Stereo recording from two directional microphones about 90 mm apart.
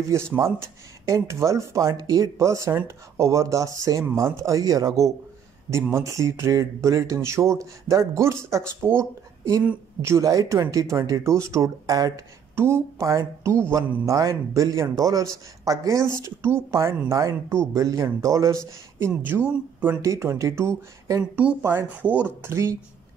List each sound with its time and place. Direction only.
0.1 s speech: 30° right (ahead or behind)
5.7 s speech: 30° right (ahead or behind)
12.5 s speech: 30° right (ahead or behind)
19.4 s speech: 20° right (ahead or behind)
20.0 s speech: 35° right (ahead or behind)
21.2 s speech: 15° right (ahead or behind)
22.4 s speech: 30° right (ahead or behind)